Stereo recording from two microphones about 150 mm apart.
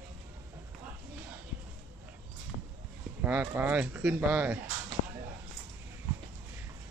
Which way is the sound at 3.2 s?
10° right (ahead or behind).